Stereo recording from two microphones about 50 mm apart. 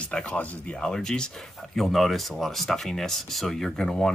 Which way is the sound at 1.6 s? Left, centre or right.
Centre.